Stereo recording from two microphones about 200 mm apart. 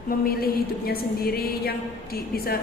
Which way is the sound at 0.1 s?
50° left (ahead or behind).